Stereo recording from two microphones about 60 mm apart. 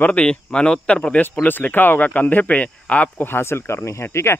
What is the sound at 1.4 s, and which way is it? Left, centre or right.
Speech, left.